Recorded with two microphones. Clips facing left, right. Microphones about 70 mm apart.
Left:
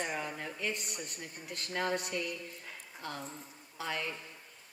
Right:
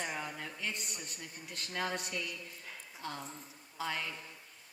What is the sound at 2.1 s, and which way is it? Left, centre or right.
Speech, left.